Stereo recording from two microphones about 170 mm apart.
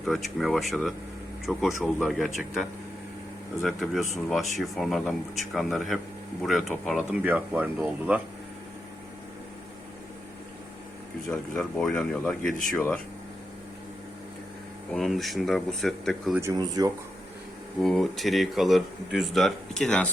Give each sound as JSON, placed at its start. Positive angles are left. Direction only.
{"t": 0.0, "sound": "speech", "side_deg": 0}
{"t": 11.3, "sound": "speech", "side_deg": 10}
{"t": 14.9, "sound": "speech", "side_deg": 0}
{"t": 16.4, "sound": "speech", "side_deg": -20}
{"t": 17.8, "sound": "speech", "side_deg": 0}